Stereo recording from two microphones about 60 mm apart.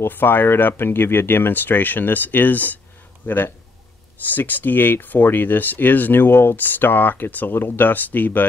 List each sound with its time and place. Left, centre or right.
0.0 s speech: left